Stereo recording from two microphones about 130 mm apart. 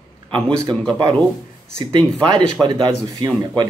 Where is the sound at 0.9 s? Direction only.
35° right (ahead or behind).